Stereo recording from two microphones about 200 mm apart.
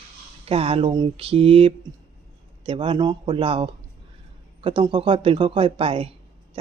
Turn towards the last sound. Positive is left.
turn(degrees=-30)  # may be behind; listen again after turning